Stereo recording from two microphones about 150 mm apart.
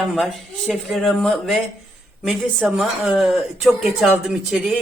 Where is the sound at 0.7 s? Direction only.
Centre (ahead or behind).